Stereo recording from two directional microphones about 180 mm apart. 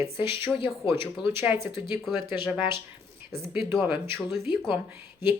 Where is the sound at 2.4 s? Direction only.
5° right (ahead or behind).